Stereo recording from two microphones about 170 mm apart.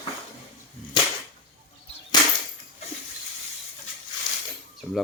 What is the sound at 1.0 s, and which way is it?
Whip, 30° left (ahead or behind).